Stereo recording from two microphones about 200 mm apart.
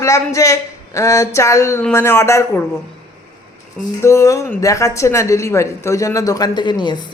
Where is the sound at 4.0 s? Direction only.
15° left (ahead or behind).